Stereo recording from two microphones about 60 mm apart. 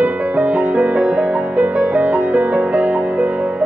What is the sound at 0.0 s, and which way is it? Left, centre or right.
Music, right.